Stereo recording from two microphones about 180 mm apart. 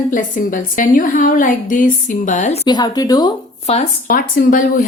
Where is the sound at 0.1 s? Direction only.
50° left (ahead or behind).